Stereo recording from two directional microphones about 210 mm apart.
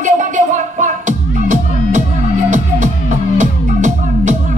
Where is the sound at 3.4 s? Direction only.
35° right (ahead or behind).